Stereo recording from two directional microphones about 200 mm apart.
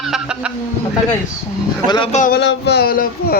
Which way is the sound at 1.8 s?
20° left (ahead or behind).